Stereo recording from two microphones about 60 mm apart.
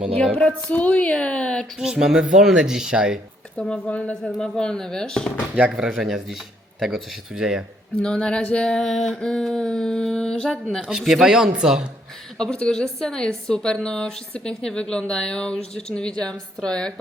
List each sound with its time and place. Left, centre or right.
0.3 s speech: left
1.8 s speech: centre
3.6 s a woman's voice: centre
5.5 s speech: centre
7.9 s a woman's voice: centre
10.8 s speech: centre
12.4 s a woman's voice: centre
16.3 s a woman's voice: centre